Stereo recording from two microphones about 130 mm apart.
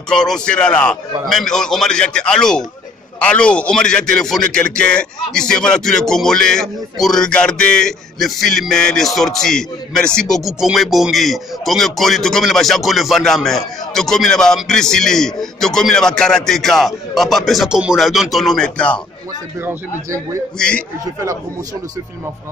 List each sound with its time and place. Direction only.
0.1 s a man's voice: 5° left (ahead or behind)
20.5 s a man's voice: 5° left (ahead or behind)
21.0 s speech: 25° right (ahead or behind)